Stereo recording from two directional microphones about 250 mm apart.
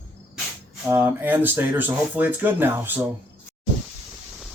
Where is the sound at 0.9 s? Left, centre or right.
Centre.